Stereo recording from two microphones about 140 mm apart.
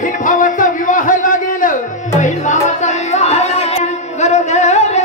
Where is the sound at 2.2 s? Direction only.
60° left (ahead or behind).